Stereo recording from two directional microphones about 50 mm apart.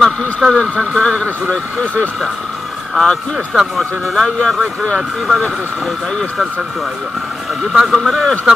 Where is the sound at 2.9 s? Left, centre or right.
Centre.